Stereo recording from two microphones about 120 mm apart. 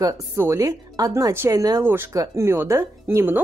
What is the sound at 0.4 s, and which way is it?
A woman's voice, 25° right (ahead or behind).